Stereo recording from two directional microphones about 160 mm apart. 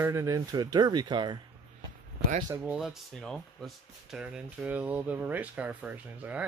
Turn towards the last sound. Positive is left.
turn(degrees=-10)  # may be behind; listen again after turning